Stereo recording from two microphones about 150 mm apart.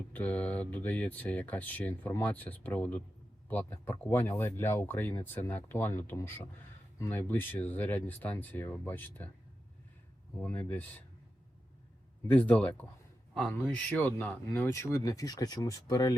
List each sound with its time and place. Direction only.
0.1 s speech: 10° left (ahead or behind)
10.4 s speech: 15° left (ahead or behind)
12.3 s a man's voice: 10° left (ahead or behind)